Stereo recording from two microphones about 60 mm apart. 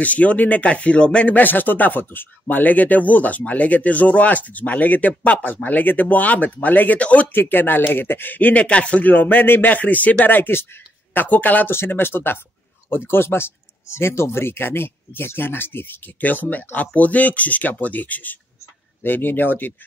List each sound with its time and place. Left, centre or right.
0.0 s speech: left
11.2 s speech: left
11.7 s speech: left